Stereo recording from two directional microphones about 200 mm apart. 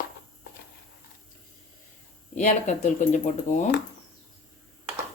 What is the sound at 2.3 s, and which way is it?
Speech, 35° left (ahead or behind).